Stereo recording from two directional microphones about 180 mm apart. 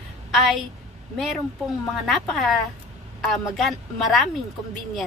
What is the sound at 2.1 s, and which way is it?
A woman's voice, centre (ahead or behind).